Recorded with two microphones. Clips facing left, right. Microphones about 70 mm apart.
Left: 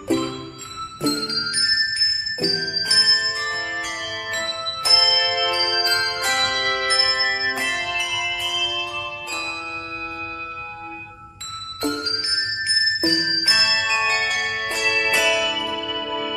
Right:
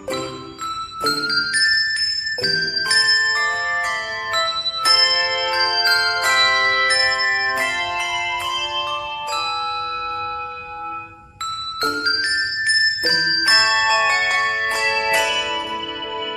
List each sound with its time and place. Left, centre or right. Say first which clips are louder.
1.0 s music: right 3 dB; right
5.0 s music: right 1 dB; right
13.0 s music: right 3 dB; right